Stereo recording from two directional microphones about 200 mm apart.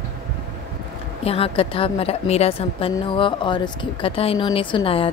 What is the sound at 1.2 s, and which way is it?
Speech, 30° left (ahead or behind).